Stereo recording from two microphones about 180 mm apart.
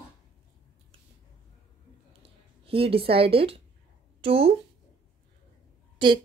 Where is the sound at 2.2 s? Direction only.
30° right (ahead or behind).